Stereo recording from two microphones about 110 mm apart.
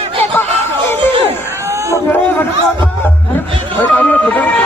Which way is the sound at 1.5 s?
25° right (ahead or behind).